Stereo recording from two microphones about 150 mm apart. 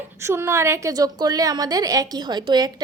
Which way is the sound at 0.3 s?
20° right (ahead or behind).